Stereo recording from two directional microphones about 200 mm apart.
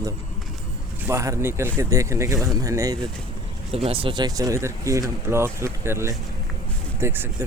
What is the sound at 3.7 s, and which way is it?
Speech, 30° right (ahead or behind).